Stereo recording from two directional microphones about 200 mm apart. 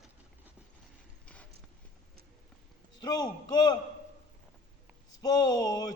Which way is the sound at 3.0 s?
20° left (ahead or behind).